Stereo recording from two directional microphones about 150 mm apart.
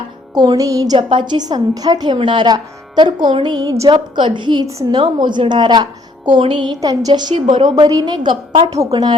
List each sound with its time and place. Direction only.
0.3 s a woman's voice: 25° right (ahead or behind)